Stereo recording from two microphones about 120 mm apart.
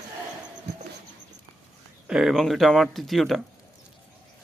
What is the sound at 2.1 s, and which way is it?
Speech, 5° right (ahead or behind).